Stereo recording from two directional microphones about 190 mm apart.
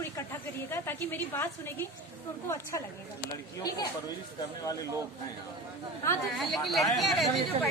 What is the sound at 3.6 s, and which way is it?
Speech, 20° left (ahead or behind).